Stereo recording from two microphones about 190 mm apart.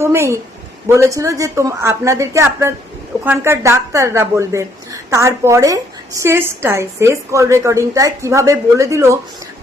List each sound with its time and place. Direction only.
0.0 s a woman's voice: 15° right (ahead or behind)